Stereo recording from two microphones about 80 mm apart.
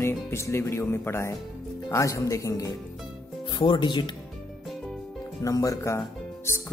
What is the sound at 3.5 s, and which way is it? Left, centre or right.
Speech, left.